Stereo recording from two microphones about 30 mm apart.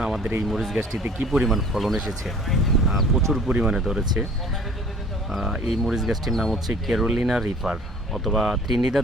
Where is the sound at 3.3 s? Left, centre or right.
Centre.